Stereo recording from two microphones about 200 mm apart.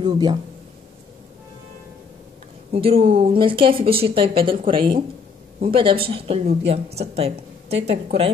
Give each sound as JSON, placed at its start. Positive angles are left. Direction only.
{"t": 0.0, "sound": "speech", "side_deg": -20}
{"t": 2.7, "sound": "speech", "side_deg": -30}